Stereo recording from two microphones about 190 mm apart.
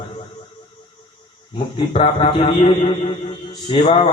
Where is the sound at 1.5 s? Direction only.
30° left (ahead or behind).